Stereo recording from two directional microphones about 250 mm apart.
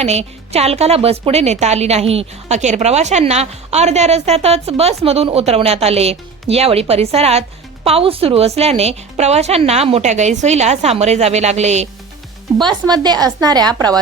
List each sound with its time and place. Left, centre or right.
0.0 s a woman's voice: right